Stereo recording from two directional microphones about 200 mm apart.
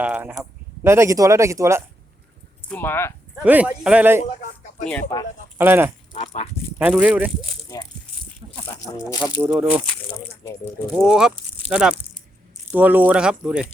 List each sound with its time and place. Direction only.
0.0 s speech: 5° right (ahead or behind)
2.6 s speech: 10° left (ahead or behind)
3.4 s speech: 5° right (ahead or behind)
4.9 s speech: 15° left (ahead or behind)
5.5 s speech: 10° right (ahead or behind)
6.1 s speech: 30° left (ahead or behind)
6.7 s speech: 5° right (ahead or behind)
9.0 s speech: 15° left (ahead or behind)
9.2 s speech: 5° right (ahead or behind); by 10.5 s 10° left (ahead or behind)
10.9 s speech: 5° right (ahead or behind)